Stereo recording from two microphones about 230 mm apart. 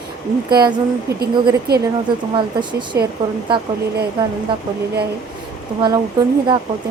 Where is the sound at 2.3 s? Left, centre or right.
Centre.